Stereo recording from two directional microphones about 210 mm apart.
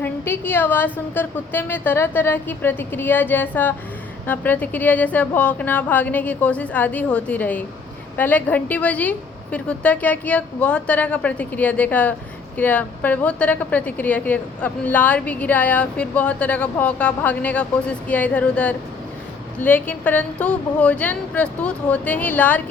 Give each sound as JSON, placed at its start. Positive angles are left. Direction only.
{"t": 0.0, "sound": "a woman's voice", "side_deg": 10}